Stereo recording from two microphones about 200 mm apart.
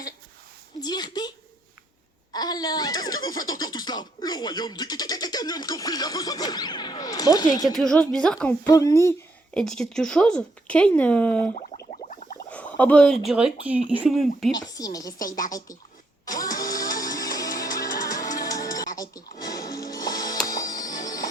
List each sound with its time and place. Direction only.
0.8 s a sound: 20° left (ahead or behind)
2.3 s speech: 20° left (ahead or behind)
7.6 s speech: centre (ahead or behind)
9.6 s speech: 5° left (ahead or behind)
11.5 s a sound: 35° left (ahead or behind)
12.5 s a sound: 5° left (ahead or behind)
13.2 s speech: 5° right (ahead or behind)
14.5 s speech: 20° left (ahead or behind)
15.2 s speech: 45° left (ahead or behind)
15.5 s speech: 15° left (ahead or behind)
16.2 s a sound: 20° left (ahead or behind)
16.7 s music: 20° left (ahead or behind)
17.7 s music: 45° left (ahead or behind)
18.3 s music: 15° left (ahead or behind)